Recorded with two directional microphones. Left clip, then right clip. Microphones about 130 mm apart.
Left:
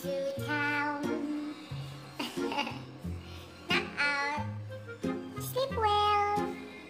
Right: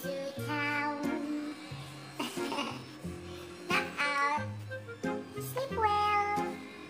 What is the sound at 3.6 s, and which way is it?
Music, 20° left (ahead or behind).